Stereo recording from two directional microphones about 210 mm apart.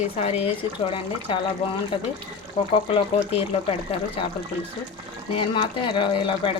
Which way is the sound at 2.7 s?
25° left (ahead or behind).